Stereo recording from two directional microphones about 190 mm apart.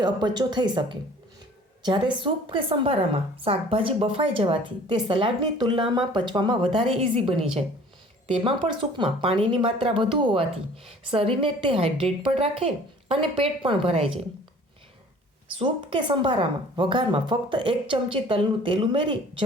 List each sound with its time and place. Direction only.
0.0 s a woman's voice: 20° right (ahead or behind)
8.8 s a woman's voice: 30° right (ahead or behind)
15.5 s a woman's voice: 25° right (ahead or behind)